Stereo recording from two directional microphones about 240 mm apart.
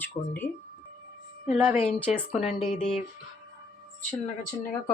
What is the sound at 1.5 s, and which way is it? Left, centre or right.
Speech, centre.